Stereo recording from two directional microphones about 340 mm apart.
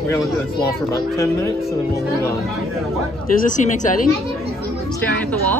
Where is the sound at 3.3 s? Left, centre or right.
Left.